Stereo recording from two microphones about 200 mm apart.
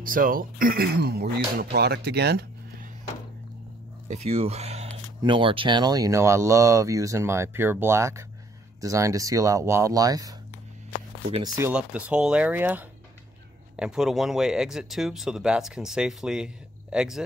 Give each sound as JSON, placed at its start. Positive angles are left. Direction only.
{"t": 0.0, "sound": "speech", "side_deg": -45}
{"t": 4.1, "sound": "speech", "side_deg": -35}
{"t": 11.3, "sound": "speech", "side_deg": -20}
{"t": 11.7, "sound": "speech", "side_deg": -5}